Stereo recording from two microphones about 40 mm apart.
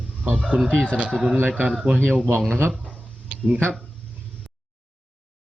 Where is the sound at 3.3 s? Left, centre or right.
Right.